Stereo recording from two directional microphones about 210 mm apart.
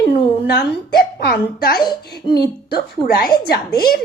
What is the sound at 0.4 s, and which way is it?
Speech, 50° left (ahead or behind).